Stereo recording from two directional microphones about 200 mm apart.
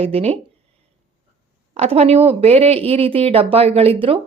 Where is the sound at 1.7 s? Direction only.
30° right (ahead or behind).